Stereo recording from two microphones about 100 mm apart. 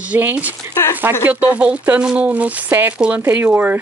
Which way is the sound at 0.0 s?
15° right (ahead or behind).